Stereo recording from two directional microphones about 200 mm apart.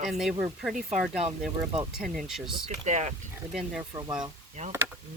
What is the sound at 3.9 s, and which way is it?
Speech, 20° right (ahead or behind).